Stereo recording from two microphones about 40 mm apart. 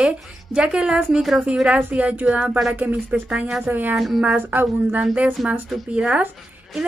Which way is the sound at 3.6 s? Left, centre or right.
Right.